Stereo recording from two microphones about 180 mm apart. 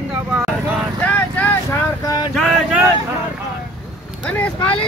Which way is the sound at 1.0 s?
10° left (ahead or behind).